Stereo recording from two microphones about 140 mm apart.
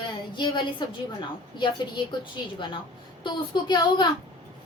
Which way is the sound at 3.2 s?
35° left (ahead or behind).